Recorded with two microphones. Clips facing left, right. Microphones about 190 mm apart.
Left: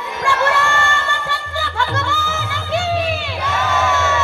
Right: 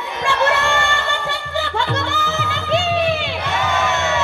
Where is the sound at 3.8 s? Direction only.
15° right (ahead or behind).